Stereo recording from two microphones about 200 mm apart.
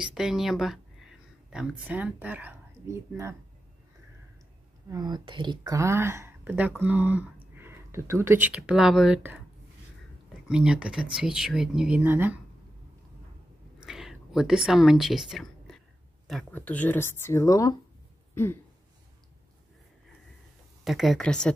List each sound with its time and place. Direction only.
0.0 s speech: centre (ahead or behind)
4.8 s speech: 20° right (ahead or behind)
10.5 s speech: 5° right (ahead or behind)
13.8 s a sound: centre (ahead or behind)
16.3 s speech: 5° left (ahead or behind)
18.3 s throat clearing: 10° left (ahead or behind)
20.8 s speech: centre (ahead or behind)